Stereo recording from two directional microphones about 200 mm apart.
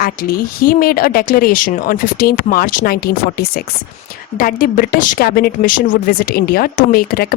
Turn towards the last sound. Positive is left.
turn(degrees=50)  # may be behind; listen again after turning